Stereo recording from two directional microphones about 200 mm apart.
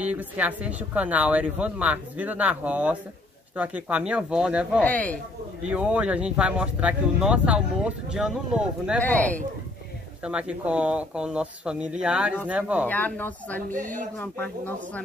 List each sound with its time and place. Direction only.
0.0 s speech: 5° right (ahead or behind)
4.8 s speech: 5° left (ahead or behind)
5.6 s speech: 5° right (ahead or behind)
9.0 s speech: 5° left (ahead or behind)
10.2 s speech: 5° right (ahead or behind)
12.8 s speech: 10° left (ahead or behind)
13.7 s speech: 40° right (ahead or behind)
14.1 s speech: 10° left (ahead or behind)